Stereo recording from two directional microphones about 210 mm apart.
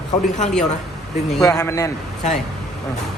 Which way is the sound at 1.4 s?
15° left (ahead or behind).